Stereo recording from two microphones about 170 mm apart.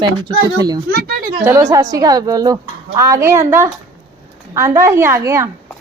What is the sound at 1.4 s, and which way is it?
A woman's voice, 15° right (ahead or behind).